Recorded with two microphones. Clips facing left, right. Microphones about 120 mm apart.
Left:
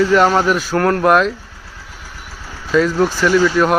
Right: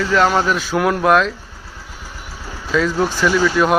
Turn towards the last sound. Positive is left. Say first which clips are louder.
# left 2 dB
turn(degrees=0)  # may be behind; listen again after turning